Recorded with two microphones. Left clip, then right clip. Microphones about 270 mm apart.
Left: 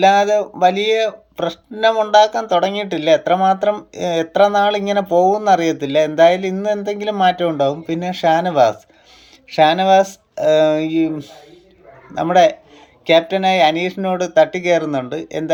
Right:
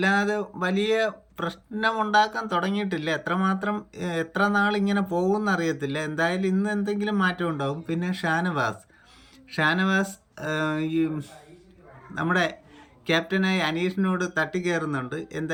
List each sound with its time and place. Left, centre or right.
0.0 s speech: centre